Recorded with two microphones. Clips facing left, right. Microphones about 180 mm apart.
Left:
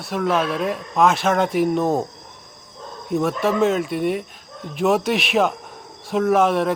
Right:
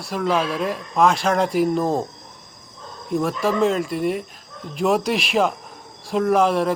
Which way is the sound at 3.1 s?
Centre (ahead or behind).